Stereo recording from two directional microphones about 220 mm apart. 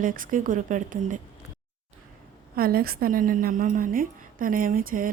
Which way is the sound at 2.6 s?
45° right (ahead or behind).